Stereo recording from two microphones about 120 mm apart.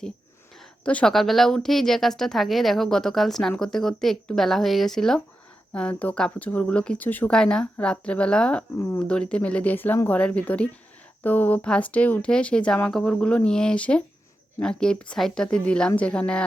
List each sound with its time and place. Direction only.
0.5 s speech: 5° left (ahead or behind)